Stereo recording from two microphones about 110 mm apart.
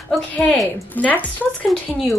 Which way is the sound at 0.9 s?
15° left (ahead or behind).